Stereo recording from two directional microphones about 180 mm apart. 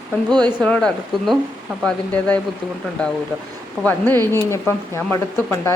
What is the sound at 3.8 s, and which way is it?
Speech, centre (ahead or behind).